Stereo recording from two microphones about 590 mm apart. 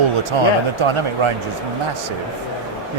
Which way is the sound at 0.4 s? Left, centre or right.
Right.